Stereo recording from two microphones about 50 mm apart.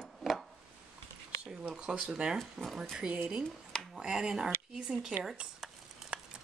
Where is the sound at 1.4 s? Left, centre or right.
Centre.